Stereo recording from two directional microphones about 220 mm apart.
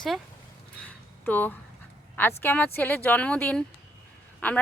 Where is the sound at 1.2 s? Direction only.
10° left (ahead or behind).